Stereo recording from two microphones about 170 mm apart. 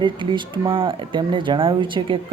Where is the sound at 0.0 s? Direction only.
30° right (ahead or behind).